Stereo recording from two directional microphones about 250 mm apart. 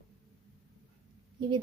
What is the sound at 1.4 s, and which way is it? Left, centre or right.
Speech, centre.